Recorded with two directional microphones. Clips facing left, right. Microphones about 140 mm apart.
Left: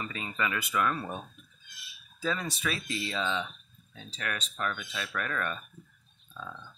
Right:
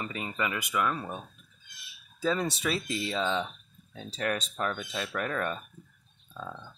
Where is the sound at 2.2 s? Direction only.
30° right (ahead or behind).